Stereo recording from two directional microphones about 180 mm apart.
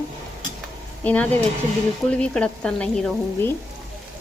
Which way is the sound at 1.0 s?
10° left (ahead or behind).